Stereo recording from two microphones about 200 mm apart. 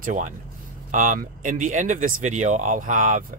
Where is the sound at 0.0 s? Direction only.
40° right (ahead or behind).